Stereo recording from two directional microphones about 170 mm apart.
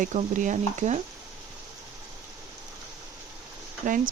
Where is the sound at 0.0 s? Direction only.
45° right (ahead or behind).